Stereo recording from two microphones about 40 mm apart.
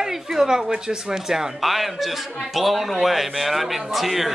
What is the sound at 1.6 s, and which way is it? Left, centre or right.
A man's voice, centre.